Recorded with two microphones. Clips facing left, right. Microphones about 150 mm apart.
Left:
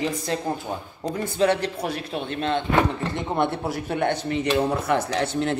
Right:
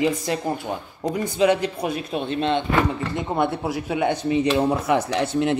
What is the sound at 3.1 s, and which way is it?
A man's voice, 10° right (ahead or behind).